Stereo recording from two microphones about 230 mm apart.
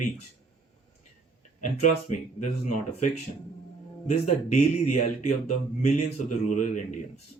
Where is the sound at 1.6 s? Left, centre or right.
Left.